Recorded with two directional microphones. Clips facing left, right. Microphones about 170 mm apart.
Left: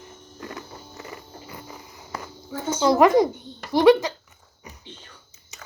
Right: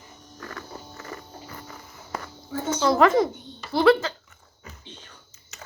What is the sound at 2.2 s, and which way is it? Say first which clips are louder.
Speech: even; 20° left (ahead or behind).